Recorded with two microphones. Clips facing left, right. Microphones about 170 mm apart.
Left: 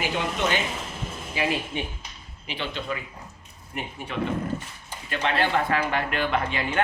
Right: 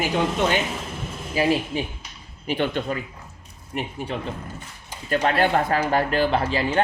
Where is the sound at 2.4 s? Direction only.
50° right (ahead or behind).